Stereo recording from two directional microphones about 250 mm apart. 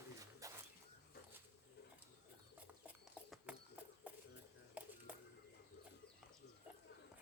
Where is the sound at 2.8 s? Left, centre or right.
Centre.